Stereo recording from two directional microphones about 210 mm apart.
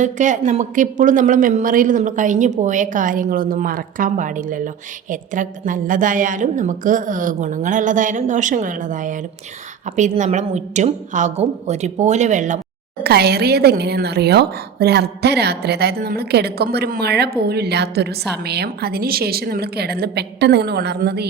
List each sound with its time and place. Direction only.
0.0 s a woman's voice: 35° right (ahead or behind)
13.0 s speech: 50° right (ahead or behind)